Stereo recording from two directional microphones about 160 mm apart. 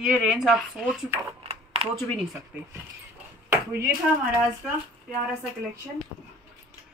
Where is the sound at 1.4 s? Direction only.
35° right (ahead or behind).